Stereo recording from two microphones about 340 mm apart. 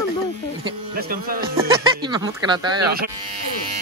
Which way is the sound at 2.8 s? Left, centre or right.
Right.